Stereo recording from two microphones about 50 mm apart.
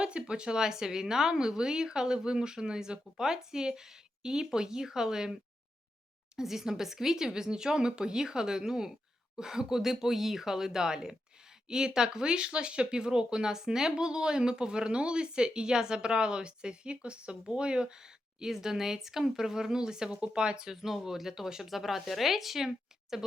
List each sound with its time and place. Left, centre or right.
0.0 s speech: centre